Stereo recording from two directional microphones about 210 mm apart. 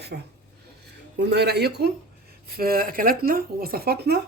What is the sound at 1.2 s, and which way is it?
A woman's voice, 50° right (ahead or behind).